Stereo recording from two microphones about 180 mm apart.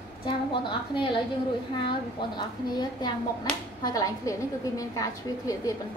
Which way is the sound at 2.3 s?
20° left (ahead or behind).